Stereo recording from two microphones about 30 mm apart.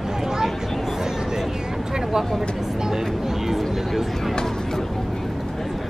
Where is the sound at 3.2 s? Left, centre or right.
Centre.